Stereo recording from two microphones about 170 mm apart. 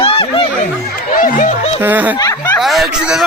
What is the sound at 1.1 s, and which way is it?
Chatter, 50° left (ahead or behind).